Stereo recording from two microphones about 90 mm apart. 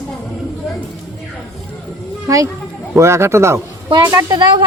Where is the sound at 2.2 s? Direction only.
35° right (ahead or behind).